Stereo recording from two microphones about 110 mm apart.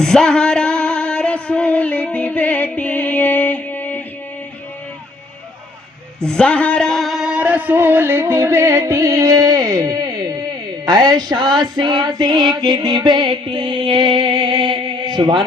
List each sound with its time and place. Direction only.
0.0 s music: 5° left (ahead or behind)
6.2 s speech: 10° left (ahead or behind); by 10.4 s 35° right (ahead or behind)
10.8 s music: 35° right (ahead or behind)